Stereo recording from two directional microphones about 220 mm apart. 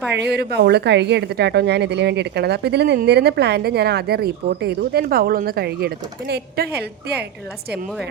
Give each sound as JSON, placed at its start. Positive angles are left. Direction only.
{"t": 0.1, "sound": "a woman's voice", "side_deg": -50}